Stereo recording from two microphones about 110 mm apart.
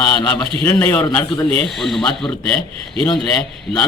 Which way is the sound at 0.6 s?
20° left (ahead or behind).